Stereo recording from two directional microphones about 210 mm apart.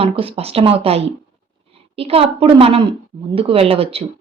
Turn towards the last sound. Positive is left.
turn(degrees=-25)  # may be behind; listen again after turning